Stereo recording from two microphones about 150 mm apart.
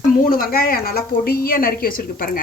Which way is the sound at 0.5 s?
80° left.